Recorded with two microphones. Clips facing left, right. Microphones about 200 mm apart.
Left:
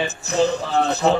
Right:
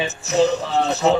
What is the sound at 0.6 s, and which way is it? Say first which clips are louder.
Speech: even; centre (ahead or behind).